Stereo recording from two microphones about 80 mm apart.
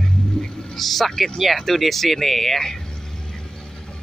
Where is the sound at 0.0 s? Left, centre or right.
Centre.